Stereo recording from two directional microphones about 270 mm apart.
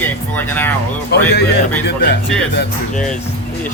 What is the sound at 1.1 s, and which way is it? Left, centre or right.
Speech, left.